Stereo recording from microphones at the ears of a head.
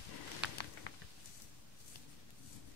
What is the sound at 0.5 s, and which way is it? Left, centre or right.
Patter, left.